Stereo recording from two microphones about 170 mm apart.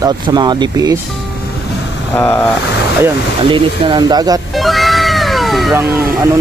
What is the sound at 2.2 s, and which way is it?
Speech, 10° left (ahead or behind).